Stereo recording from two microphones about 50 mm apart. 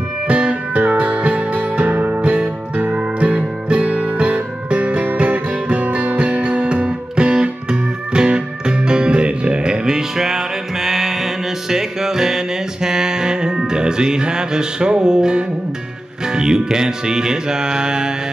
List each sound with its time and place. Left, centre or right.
0.3 s music: right